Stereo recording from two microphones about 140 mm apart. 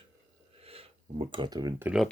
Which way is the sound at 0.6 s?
45° right (ahead or behind).